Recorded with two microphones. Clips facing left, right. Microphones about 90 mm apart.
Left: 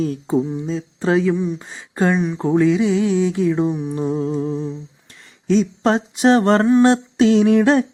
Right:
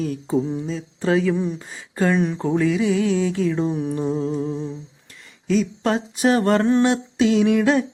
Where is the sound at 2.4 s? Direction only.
25° left (ahead or behind).